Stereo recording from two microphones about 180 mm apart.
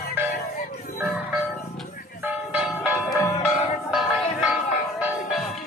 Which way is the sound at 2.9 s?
15° left (ahead or behind).